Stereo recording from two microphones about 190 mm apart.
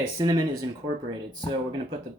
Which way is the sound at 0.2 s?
20° right (ahead or behind).